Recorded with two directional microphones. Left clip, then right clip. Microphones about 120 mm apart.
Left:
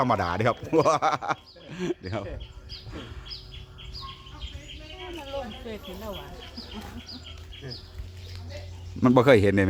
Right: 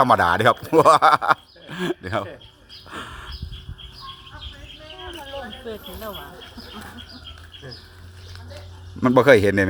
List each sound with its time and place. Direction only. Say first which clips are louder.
0.0 s speech: right 9 dB; 55° right (ahead or behind)
2.9 s bird: right 13 dB; 75° right (ahead or behind)
9.0 s a man's voice: right 4 dB; 5° left (ahead or behind)